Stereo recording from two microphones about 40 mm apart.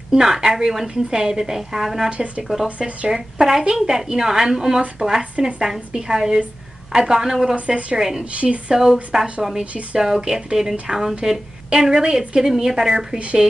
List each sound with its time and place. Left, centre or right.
0.1 s a woman's voice: centre
2.0 s a woman's voice: right
3.1 s a woman's voice: centre
7.5 s a woman's voice: right
8.0 s a woman's voice: centre
8.4 s a woman's voice: right
8.7 s a woman's voice: centre